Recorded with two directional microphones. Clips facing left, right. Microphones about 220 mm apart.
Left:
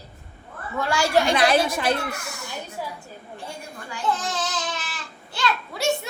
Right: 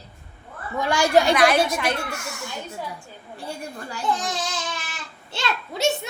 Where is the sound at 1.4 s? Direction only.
30° left (ahead or behind).